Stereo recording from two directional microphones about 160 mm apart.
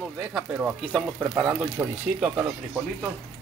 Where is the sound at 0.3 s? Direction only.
5° right (ahead or behind).